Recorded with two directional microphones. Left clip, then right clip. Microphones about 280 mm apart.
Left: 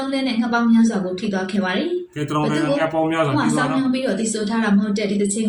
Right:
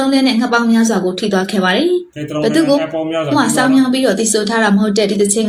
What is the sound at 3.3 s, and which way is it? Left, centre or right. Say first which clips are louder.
A woman's voice: right 7 dB; right.